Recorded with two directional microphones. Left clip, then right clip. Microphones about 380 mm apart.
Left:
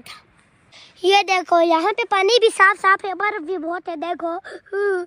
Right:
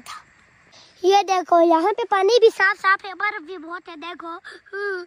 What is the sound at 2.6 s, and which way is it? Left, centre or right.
A woman's voice, centre.